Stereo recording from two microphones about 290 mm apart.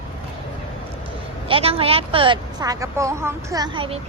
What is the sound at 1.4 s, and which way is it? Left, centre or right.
A woman's voice, centre.